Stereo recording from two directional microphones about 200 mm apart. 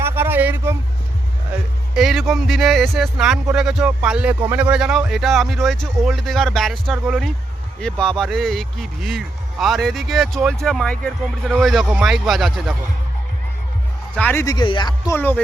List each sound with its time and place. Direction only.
0.0 s a sound: 10° right (ahead or behind)
2.0 s speech: centre (ahead or behind)
14.2 s speech: 10° left (ahead or behind)